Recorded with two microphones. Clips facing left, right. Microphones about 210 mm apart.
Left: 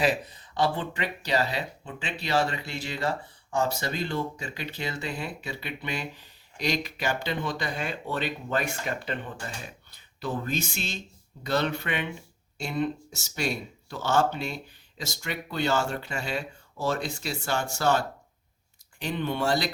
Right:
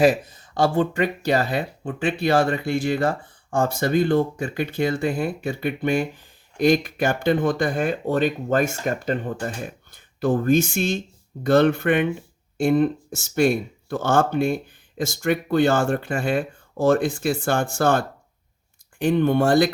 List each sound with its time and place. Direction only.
0.0 s speech: 45° right (ahead or behind)